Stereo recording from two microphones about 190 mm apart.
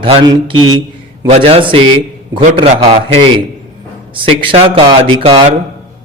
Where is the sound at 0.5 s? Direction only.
90° right.